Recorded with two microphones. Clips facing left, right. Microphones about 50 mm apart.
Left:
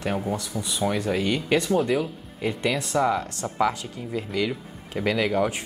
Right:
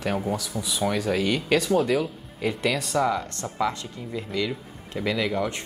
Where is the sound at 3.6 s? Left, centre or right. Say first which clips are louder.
Left 3 dB; left.